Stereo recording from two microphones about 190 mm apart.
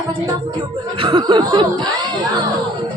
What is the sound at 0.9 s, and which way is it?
Chuckle, 25° right (ahead or behind).